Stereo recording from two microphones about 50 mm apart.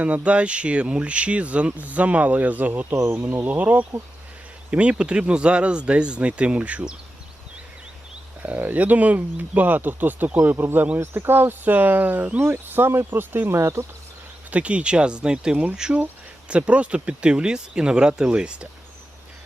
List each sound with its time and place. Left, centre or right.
0.0 s speech: right
2.9 s speech: right
3.4 s speech: right
8.4 s speech: right
13.5 s speech: right
14.5 s speech: right